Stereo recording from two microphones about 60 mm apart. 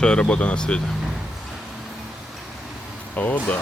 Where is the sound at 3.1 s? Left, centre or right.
Left.